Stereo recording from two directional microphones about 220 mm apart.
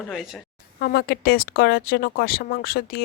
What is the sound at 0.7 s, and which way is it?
Speech, 45° left (ahead or behind).